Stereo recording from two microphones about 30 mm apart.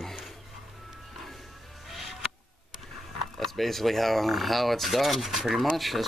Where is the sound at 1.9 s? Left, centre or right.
Centre.